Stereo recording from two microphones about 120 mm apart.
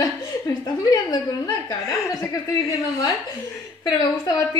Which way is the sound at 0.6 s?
35° left (ahead or behind).